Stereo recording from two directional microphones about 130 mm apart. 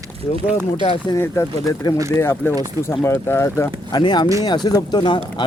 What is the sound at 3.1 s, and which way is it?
Speech, 20° left (ahead or behind).